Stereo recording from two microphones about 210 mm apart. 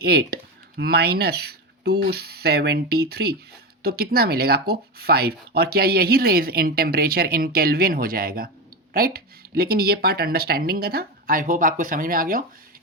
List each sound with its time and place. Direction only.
0.0 s speech: 50° right (ahead or behind)